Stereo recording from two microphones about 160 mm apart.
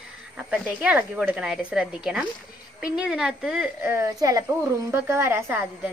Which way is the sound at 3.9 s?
20° right (ahead or behind).